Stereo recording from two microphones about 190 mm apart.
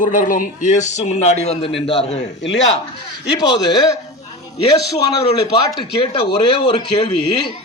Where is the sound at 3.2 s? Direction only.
65° left (ahead or behind).